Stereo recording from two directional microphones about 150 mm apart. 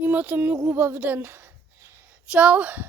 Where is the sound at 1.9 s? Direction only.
10° right (ahead or behind).